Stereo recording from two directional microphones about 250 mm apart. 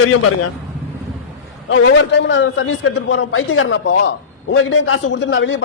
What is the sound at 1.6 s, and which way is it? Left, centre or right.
A man's voice, left.